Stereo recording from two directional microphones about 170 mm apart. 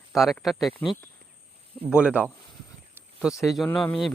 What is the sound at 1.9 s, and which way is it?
Speech, 5° right (ahead or behind).